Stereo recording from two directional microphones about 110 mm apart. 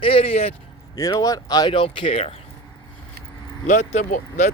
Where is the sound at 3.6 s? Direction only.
90° left.